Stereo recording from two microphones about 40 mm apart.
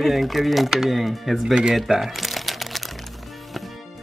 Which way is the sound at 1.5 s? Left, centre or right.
Right.